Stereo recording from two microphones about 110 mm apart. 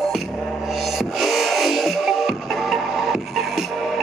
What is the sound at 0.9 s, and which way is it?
Music, centre (ahead or behind).